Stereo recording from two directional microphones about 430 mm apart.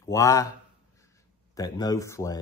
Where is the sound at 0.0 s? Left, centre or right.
Centre.